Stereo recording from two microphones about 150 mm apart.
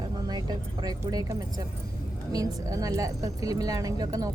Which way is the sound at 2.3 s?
25° right (ahead or behind).